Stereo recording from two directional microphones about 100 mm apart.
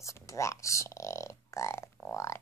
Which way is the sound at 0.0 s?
30° left (ahead or behind).